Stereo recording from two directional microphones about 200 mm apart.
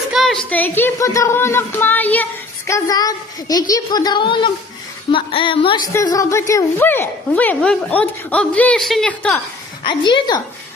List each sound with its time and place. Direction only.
0.1 s a woman's voice: centre (ahead or behind)
9.8 s a woman's voice: 25° left (ahead or behind)